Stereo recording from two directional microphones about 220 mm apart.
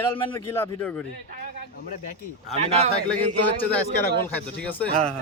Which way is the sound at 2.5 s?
25° right (ahead or behind).